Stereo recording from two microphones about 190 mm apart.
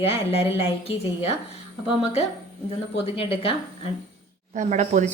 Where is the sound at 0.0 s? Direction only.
30° left (ahead or behind).